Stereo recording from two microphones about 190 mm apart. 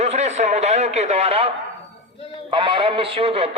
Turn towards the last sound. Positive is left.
turn(degrees=-30)  # may be behind; listen again after turning